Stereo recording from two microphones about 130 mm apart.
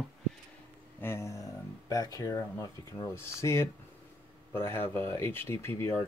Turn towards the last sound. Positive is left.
turn(degrees=20)  # may be behind; listen again after turning